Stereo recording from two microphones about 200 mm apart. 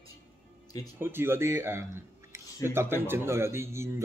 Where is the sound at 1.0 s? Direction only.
10° right (ahead or behind).